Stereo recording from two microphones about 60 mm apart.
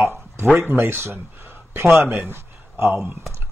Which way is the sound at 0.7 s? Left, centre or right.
Right.